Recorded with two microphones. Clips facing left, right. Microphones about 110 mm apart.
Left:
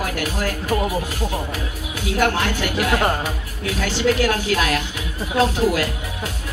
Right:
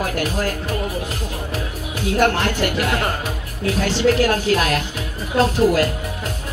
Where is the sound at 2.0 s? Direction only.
45° right (ahead or behind).